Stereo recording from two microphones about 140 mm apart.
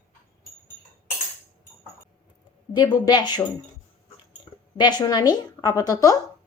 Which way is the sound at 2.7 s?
30° left (ahead or behind).